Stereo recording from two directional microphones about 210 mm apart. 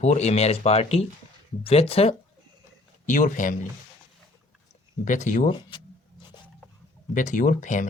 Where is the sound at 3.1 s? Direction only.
40° left (ahead or behind).